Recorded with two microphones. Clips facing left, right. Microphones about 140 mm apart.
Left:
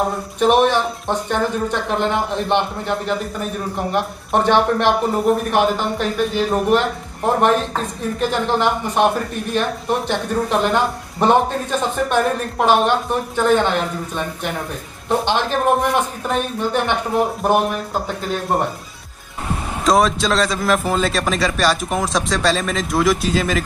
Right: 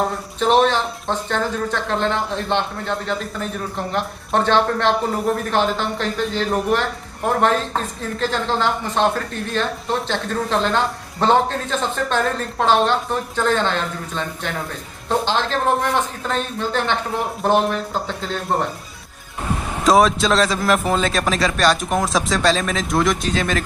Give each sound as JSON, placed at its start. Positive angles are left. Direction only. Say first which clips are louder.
{"t": 0.4, "sound": "speech", "louder": "left 2 dB", "side_deg": 15}
{"t": 19.8, "sound": "a man's voice", "louder": "right 1 dB", "side_deg": 0}